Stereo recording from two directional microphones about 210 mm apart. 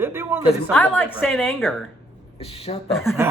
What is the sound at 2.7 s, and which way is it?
Speech, 30° left (ahead or behind).